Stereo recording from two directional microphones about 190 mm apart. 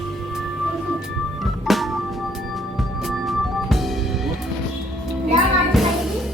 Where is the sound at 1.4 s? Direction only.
Centre (ahead or behind).